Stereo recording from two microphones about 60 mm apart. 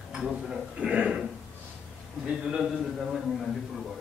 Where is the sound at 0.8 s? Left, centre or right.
Centre.